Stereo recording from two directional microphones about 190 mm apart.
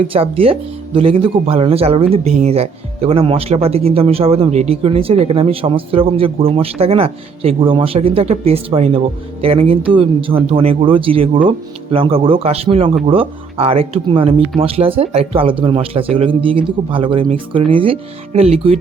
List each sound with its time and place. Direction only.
0.0 s speech: 30° right (ahead or behind)